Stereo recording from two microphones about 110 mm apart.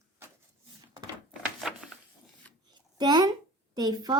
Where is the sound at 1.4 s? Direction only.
5° right (ahead or behind).